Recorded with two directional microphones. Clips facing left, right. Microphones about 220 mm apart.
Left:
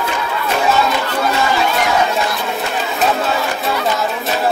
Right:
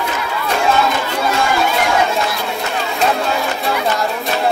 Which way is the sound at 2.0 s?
Centre (ahead or behind).